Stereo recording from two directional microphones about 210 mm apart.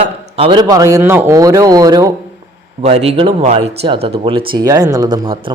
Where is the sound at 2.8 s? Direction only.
30° right (ahead or behind).